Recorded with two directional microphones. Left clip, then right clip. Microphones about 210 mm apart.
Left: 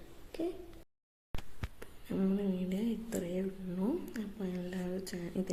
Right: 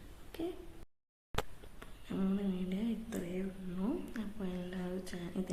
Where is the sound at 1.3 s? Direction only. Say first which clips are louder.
Right 11 dB; 35° right (ahead or behind).